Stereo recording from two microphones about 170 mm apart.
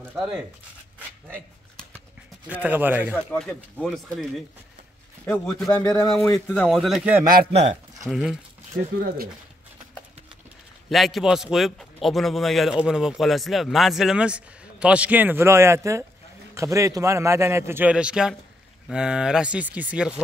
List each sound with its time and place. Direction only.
2.4 s a man's voice: 10° right (ahead or behind)
3.3 s a man's voice: 5° left (ahead or behind)
5.7 s speech: 20° left (ahead or behind)
6.3 s a man's voice: 5° left (ahead or behind)
10.9 s a man's voice: centre (ahead or behind)